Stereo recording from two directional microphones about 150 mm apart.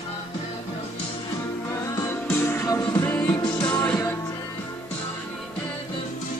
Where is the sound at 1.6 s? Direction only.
20° left (ahead or behind).